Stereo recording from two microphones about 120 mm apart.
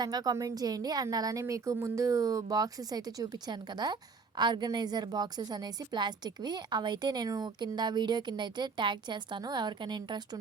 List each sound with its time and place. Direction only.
0.0 s a woman's voice: 35° right (ahead or behind)